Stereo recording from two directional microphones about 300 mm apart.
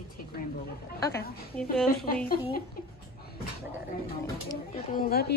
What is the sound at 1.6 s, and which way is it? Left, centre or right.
Speech, centre.